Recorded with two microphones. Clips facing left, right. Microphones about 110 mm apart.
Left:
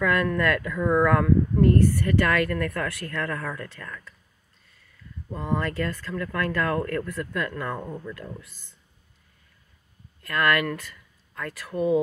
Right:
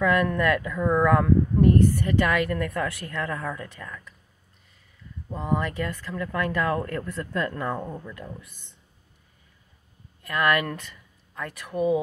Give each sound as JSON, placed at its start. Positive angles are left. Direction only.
{"t": 0.0, "sound": "speech", "side_deg": -20}
{"t": 5.3, "sound": "speech", "side_deg": -20}
{"t": 10.2, "sound": "speech", "side_deg": -20}